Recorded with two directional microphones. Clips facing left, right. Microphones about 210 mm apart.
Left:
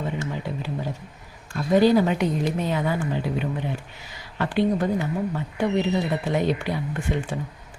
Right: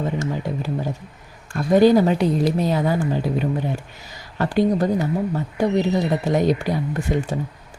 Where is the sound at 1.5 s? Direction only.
45° right (ahead or behind).